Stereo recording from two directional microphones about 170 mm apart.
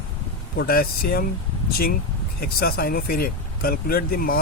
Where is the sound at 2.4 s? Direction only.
65° left (ahead or behind).